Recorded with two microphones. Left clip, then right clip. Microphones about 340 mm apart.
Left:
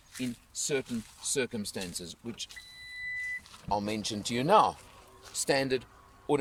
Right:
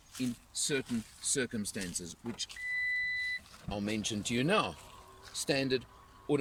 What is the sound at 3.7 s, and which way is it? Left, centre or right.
Speech, centre.